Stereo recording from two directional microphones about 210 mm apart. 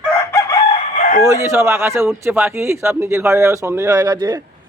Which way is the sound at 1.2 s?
15° right (ahead or behind).